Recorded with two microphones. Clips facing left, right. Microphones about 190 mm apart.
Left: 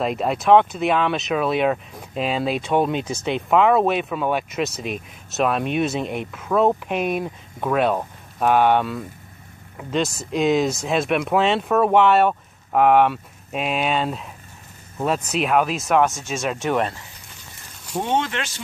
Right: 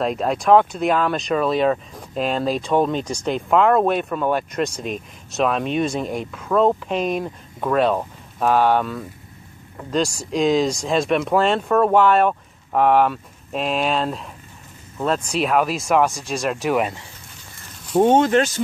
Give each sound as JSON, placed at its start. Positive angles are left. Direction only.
{"t": 0.0, "sound": "speech", "side_deg": 5}
{"t": 18.0, "sound": "speech", "side_deg": -45}